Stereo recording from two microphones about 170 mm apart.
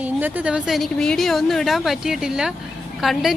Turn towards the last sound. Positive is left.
turn(degrees=0)  # may be behind; listen again after turning